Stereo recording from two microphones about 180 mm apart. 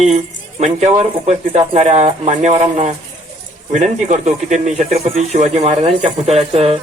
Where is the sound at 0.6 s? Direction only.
40° right (ahead or behind).